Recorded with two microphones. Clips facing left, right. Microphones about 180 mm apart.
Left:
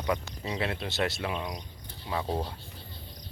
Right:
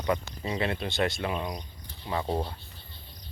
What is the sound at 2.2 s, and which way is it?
Speech, 10° right (ahead or behind).